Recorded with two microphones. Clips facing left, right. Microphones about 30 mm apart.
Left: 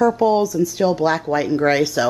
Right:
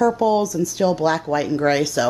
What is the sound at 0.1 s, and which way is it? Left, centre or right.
Speech, centre.